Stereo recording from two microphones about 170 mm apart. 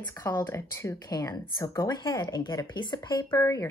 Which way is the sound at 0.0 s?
20° left (ahead or behind).